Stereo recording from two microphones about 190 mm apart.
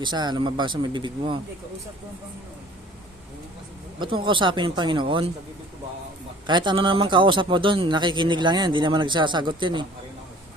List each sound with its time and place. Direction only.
0.0 s speech: 25° right (ahead or behind)
4.0 s speech: 25° right (ahead or behind)
6.5 s speech: 25° right (ahead or behind)